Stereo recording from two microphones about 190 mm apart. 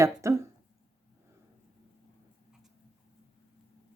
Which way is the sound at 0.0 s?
15° right (ahead or behind).